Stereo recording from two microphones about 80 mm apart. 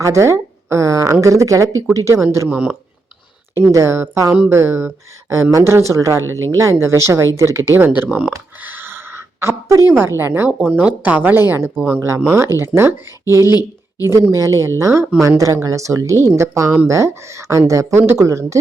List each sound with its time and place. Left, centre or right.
0.0 s a woman's voice: right
2.5 s speech: centre
3.5 s speech: right
7.9 s speech: right
8.6 s a sound: right
10.0 s speech: right
10.7 s speech: centre; by 13.0 s right
13.4 s speech: left
14.1 s speech: right